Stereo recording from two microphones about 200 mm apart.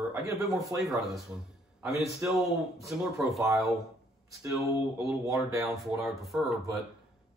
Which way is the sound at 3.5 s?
Centre (ahead or behind).